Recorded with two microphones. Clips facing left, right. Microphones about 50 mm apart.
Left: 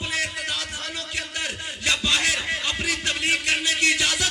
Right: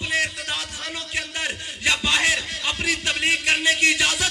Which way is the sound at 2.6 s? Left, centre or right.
Right.